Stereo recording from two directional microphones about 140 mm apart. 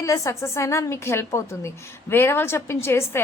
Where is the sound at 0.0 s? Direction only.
20° left (ahead or behind).